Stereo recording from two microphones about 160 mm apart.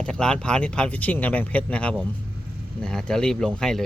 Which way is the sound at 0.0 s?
5° left (ahead or behind).